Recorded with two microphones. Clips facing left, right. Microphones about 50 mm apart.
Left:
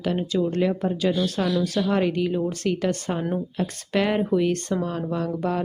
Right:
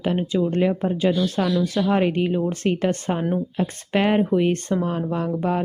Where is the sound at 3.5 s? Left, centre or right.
Right.